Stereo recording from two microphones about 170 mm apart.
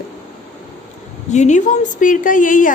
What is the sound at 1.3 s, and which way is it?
A woman's voice, 45° left (ahead or behind).